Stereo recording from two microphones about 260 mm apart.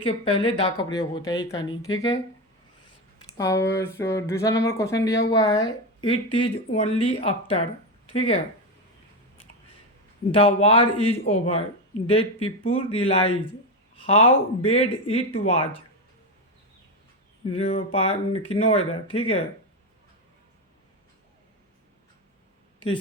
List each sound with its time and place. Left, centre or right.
0.0 s speech: centre
3.2 s speech: centre
10.3 s speech: left
17.4 s speech: left